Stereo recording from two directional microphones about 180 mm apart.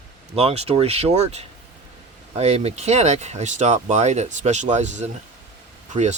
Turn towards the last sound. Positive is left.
turn(degrees=-40)  # may be behind; listen again after turning